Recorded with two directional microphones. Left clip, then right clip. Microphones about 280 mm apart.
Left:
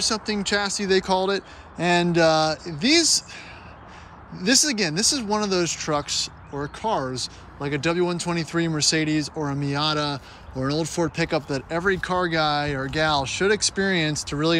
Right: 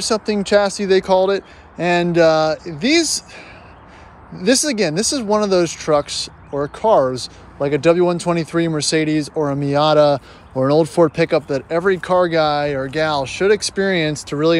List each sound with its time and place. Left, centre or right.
0.0 s speech: centre
9.3 s speech: centre